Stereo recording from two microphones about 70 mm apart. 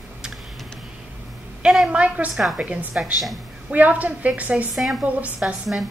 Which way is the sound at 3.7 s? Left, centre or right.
Right.